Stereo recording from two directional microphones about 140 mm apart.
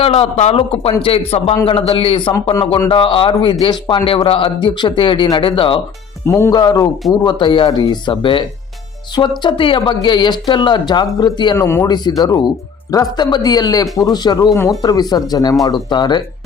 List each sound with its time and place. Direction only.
0.0 s a man's voice: 45° left (ahead or behind)
6.2 s speech: 20° left (ahead or behind)
6.5 s a man's voice: 30° left (ahead or behind)
11.5 s speech: 20° left (ahead or behind)
11.9 s a man's voice: 30° left (ahead or behind)